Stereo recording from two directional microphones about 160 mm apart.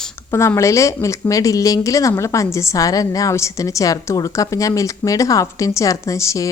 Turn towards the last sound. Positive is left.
turn(degrees=20)  # may be behind; listen again after turning